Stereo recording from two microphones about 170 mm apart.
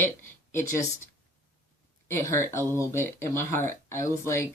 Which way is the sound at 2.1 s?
15° left (ahead or behind).